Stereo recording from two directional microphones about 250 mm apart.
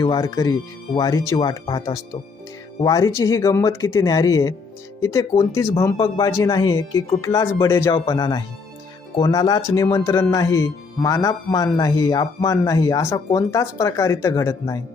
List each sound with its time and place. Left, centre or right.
0.0 s speech: centre